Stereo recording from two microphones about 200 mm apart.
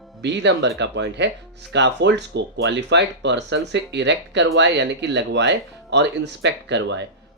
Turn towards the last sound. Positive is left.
turn(degrees=-60)  # may be behind; listen again after turning